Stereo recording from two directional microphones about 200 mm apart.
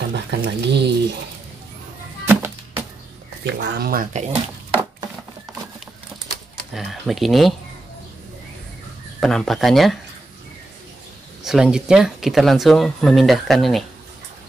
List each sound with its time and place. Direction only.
0.1 s speech: 60° right (ahead or behind)
2.2 s music: 10° right (ahead or behind)
3.4 s speech: 55° right (ahead or behind); by 4.7 s 35° right (ahead or behind)
6.7 s speech: centre (ahead or behind)
9.2 s speech: centre (ahead or behind)
11.4 s speech: centre (ahead or behind)